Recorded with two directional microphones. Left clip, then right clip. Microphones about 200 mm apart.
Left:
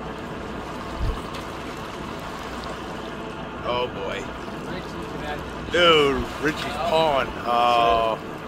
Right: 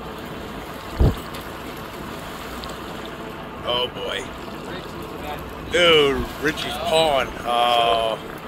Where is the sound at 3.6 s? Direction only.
15° right (ahead or behind).